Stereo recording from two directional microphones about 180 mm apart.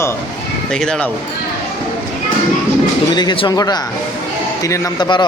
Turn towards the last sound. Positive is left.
turn(degrees=25)  # may be behind; listen again after turning